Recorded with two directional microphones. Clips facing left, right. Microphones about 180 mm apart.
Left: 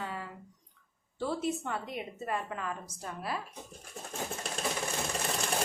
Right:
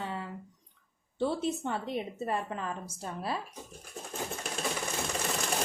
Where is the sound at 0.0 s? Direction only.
25° right (ahead or behind).